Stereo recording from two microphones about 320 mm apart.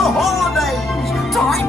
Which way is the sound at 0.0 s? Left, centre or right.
Centre.